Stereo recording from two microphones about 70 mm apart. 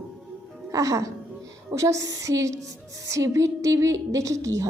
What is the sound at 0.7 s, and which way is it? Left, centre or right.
A woman's voice, right.